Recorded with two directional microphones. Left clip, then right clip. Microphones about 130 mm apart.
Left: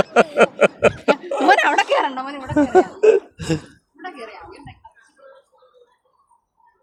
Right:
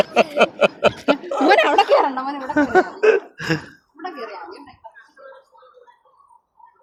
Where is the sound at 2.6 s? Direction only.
35° left (ahead or behind).